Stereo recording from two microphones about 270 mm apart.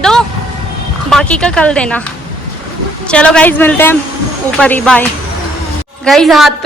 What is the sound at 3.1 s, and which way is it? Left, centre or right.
A woman's voice, centre.